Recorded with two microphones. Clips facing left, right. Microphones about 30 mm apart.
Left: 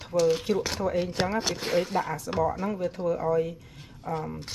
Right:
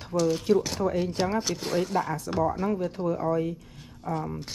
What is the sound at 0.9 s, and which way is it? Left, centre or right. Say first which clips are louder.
Speech: even; left.